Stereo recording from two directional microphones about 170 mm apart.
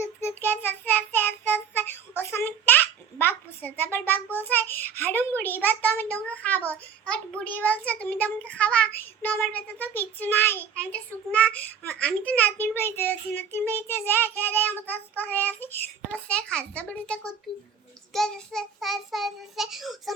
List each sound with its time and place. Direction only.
0.0 s child singing: 15° left (ahead or behind)